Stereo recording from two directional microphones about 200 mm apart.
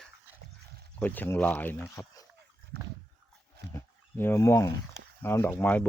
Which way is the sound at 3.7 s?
10° left (ahead or behind).